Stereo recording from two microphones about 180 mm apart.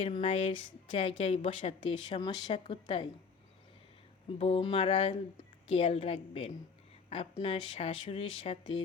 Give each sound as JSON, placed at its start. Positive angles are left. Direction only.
{"t": 0.0, "sound": "a woman's voice", "side_deg": 30}
{"t": 4.3, "sound": "speech", "side_deg": 30}